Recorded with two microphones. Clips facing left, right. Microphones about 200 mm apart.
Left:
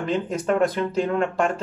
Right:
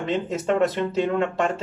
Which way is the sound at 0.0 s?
25° right (ahead or behind).